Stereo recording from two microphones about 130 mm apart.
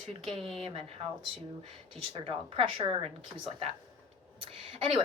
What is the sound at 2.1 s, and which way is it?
Speech, 45° right (ahead or behind).